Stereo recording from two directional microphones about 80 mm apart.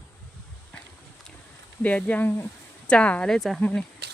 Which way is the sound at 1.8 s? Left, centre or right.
Centre.